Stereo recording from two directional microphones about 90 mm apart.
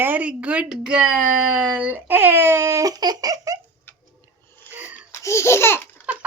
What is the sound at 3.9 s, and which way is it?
Tick-tock, 20° left (ahead or behind).